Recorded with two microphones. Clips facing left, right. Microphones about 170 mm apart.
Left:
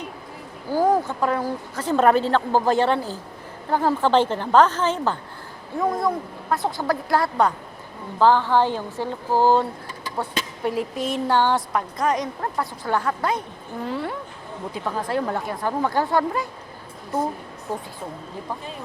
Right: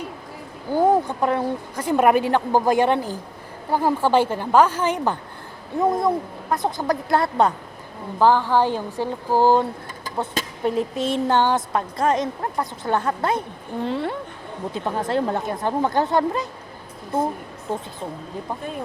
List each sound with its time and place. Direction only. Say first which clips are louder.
0.7 s speech: right 2 dB; 20° right (ahead or behind)
1.7 s a woman's voice: even; 15° right (ahead or behind)
8.2 s a woman's voice: even; 10° right (ahead or behind)
10.4 s a sound: right 1 dB; 45° right (ahead or behind)
10.7 s a woman's voice: right 3 dB; 25° right (ahead or behind)
17.7 s a woman's voice: right 2 dB; 25° right (ahead or behind)